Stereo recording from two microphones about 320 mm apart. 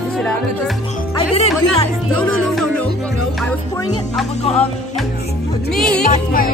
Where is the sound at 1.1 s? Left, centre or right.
Centre.